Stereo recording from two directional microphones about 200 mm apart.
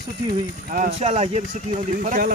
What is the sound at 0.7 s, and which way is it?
Speech, 35° right (ahead or behind).